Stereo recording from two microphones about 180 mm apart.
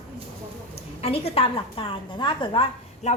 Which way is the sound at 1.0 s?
35° left (ahead or behind).